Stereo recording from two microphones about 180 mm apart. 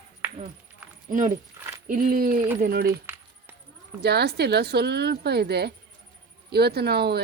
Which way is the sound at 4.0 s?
65° right (ahead or behind).